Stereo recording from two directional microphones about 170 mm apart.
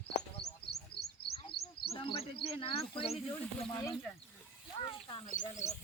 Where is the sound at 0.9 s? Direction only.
70° left (ahead or behind).